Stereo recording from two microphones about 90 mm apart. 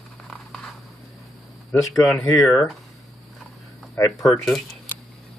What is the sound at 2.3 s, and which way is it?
Speech, 35° left (ahead or behind).